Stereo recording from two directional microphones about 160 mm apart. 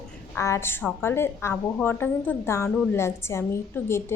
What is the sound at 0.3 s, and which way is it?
A woman's voice, 15° left (ahead or behind).